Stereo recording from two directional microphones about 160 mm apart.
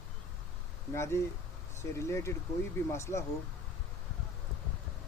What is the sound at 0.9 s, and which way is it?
Speech, 15° left (ahead or behind).